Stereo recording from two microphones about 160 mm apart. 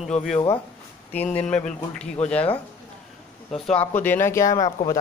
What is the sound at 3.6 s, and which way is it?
Speech, 5° left (ahead or behind).